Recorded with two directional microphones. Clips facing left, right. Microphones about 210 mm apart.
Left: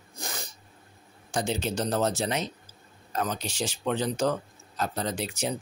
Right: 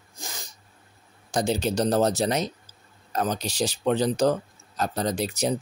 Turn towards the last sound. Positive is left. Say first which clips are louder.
# right 5 dB
turn(degrees=-40)  # may be behind; listen again after turning